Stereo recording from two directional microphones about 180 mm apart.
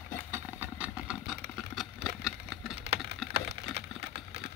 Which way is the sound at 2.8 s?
70° right (ahead or behind).